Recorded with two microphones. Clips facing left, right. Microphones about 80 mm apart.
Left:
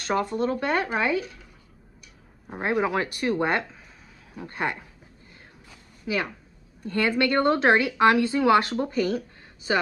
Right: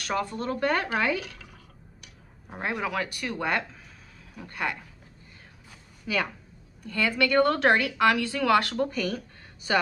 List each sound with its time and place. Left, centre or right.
0.0 s a woman's voice: left
1.2 s drip: right
2.8 s a woman's voice: left
6.1 s a woman's voice: centre
6.8 s a woman's voice: left